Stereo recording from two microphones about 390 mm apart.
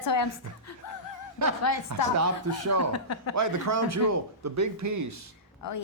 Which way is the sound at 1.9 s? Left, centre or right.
Right.